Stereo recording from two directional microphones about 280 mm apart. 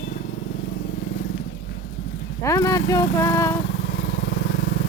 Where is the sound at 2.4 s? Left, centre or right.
Centre.